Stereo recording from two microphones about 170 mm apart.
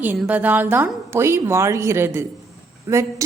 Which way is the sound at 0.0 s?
10° right (ahead or behind).